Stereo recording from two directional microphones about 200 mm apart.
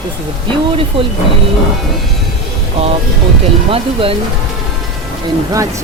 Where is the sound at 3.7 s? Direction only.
25° right (ahead or behind).